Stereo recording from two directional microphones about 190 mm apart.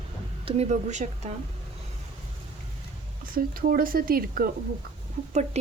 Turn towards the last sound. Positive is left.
turn(degrees=-40)  # may be behind; listen again after turning